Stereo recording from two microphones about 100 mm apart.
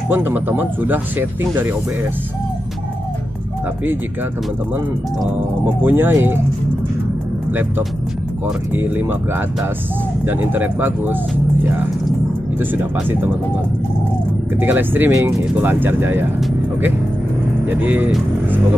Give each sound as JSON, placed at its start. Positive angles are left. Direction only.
{"t": 0.1, "sound": "speech", "side_deg": -20}
{"t": 5.8, "sound": "speech", "side_deg": -20}
{"t": 8.7, "sound": "speech", "side_deg": -20}
{"t": 10.2, "sound": "speech", "side_deg": -20}
{"t": 12.7, "sound": "speech", "side_deg": -20}
{"t": 14.6, "sound": "speech", "side_deg": -20}
{"t": 17.6, "sound": "speech", "side_deg": -15}